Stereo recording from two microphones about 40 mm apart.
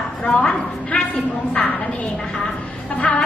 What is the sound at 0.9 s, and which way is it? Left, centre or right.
Speech, left.